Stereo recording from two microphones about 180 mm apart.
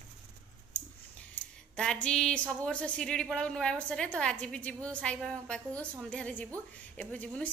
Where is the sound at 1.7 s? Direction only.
5° left (ahead or behind).